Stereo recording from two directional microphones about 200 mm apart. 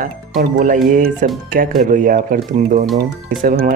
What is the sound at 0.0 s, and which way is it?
Speech, 40° right (ahead or behind).